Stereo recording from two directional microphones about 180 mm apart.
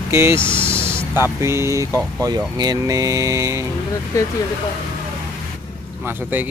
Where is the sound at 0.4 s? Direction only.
5° left (ahead or behind).